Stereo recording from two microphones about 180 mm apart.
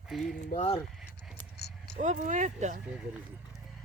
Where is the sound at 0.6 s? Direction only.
30° left (ahead or behind).